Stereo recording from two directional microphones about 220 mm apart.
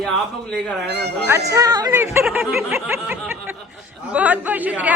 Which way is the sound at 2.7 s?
10° right (ahead or behind).